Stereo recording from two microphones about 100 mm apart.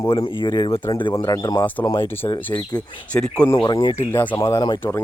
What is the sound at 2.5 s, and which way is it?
Speech, 35° left (ahead or behind).